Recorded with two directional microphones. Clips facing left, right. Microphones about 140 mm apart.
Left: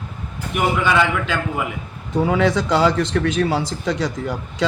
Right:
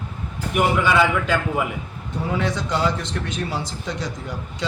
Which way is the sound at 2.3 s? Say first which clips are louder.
Left 5 dB; 90° left.